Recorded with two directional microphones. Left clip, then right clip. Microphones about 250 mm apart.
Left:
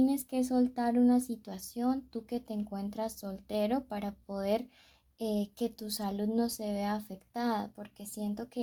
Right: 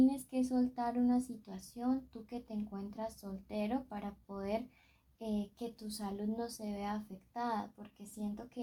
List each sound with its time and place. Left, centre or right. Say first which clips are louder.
0.0 s speech: left 2 dB; left